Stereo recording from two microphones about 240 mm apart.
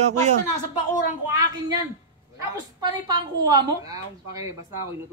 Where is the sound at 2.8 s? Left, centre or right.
Centre.